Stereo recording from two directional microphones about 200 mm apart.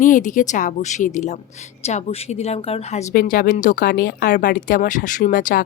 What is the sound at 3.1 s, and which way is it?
A woman's voice, 45° left (ahead or behind).